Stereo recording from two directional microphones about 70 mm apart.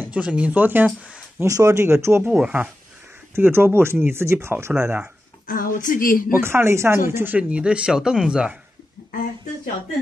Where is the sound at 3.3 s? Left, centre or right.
Right.